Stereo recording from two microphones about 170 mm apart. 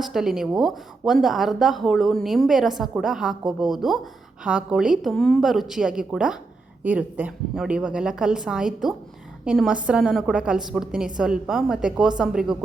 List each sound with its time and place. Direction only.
0.0 s a woman's voice: centre (ahead or behind)